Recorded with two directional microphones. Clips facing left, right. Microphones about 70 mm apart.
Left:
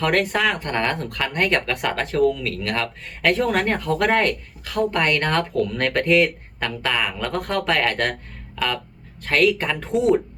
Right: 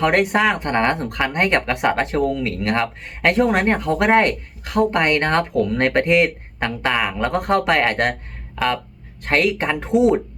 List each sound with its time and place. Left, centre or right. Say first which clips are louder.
0.0 s speech: right 3 dB; centre
9.2 s speech: even; right